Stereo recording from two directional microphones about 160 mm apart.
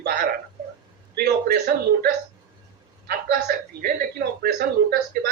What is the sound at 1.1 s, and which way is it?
Speech, 70° right (ahead or behind).